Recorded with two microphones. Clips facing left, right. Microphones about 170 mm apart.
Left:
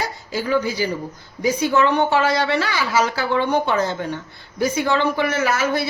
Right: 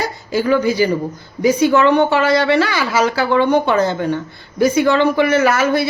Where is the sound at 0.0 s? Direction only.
65° right (ahead or behind).